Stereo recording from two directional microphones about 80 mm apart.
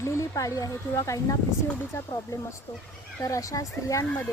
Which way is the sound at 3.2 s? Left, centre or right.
Left.